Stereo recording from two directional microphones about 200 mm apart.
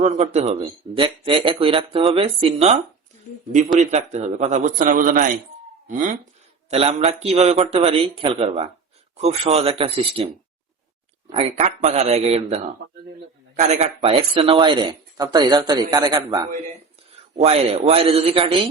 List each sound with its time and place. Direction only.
0.0 s speech: 30° right (ahead or behind)
3.8 s speech: 35° right (ahead or behind)
6.7 s speech: 30° right (ahead or behind)
11.3 s speech: 30° right (ahead or behind)
13.6 s speech: 35° right (ahead or behind)
17.3 s speech: 30° right (ahead or behind)